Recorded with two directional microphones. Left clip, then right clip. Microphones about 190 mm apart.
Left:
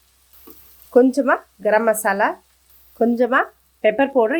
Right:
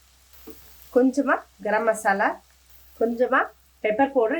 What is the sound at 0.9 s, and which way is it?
Speech, 45° left (ahead or behind).